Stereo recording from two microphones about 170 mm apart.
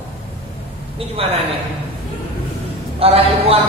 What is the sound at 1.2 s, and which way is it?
Speech, 35° right (ahead or behind).